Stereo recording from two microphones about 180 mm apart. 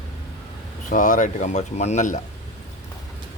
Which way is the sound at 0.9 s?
45° left (ahead or behind).